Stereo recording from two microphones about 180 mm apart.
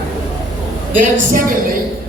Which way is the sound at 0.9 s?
50° right (ahead or behind).